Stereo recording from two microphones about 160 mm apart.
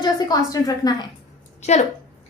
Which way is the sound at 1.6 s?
45° left (ahead or behind).